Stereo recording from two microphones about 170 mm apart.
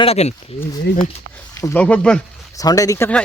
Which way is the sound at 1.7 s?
5° left (ahead or behind).